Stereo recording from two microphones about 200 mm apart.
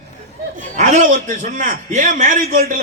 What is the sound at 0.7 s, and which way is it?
A man's voice, 40° right (ahead or behind).